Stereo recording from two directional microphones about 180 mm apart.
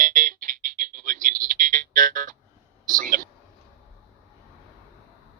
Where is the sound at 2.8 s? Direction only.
50° right (ahead or behind).